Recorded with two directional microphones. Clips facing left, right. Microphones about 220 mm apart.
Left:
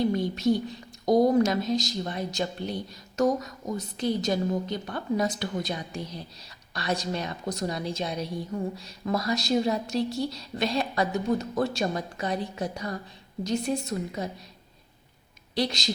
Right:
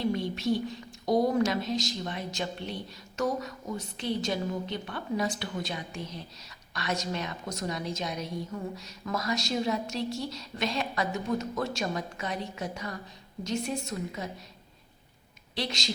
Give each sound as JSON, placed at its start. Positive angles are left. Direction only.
{"t": 0.1, "sound": "whispering", "side_deg": 40}
{"t": 1.0, "sound": "a woman's voice", "side_deg": 45}
{"t": 15.5, "sound": "a woman's voice", "side_deg": 35}